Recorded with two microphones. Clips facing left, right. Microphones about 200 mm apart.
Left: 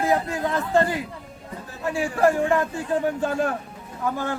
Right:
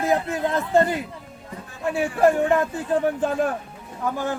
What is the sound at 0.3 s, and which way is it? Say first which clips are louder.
Speech: right 1 dB; 20° right (ahead or behind).